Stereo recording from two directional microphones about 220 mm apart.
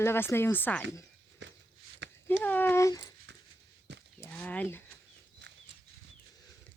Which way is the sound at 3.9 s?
55° right (ahead or behind).